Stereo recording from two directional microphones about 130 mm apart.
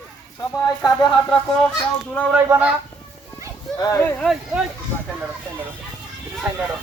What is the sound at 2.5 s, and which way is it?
Speech, 10° right (ahead or behind).